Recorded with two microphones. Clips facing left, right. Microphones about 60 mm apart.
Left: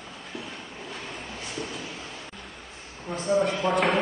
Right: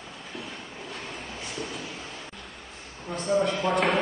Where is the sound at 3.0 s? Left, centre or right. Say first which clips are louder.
Left 1 dB; centre.